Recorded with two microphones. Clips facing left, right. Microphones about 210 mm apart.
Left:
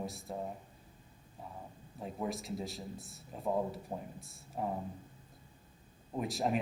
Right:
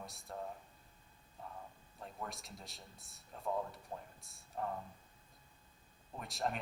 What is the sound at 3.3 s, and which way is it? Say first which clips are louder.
Speech: left 5 dB; 15° left (ahead or behind).